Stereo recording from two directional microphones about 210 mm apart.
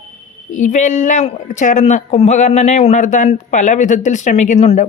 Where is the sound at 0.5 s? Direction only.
35° left (ahead or behind).